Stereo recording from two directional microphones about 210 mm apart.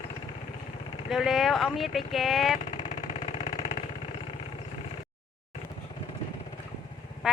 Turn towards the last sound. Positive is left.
turn(degrees=-5)  # may be behind; listen again after turning